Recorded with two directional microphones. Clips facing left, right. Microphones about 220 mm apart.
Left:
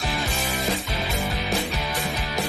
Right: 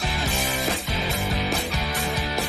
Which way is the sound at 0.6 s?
Centre (ahead or behind).